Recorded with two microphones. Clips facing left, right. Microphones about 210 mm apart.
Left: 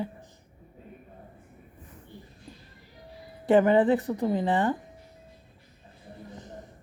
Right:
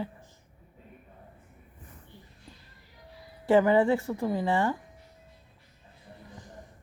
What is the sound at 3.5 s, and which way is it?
Speech, 20° left (ahead or behind).